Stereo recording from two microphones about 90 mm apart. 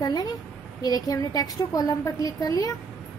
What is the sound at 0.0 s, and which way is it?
A woman's voice, 50° left (ahead or behind).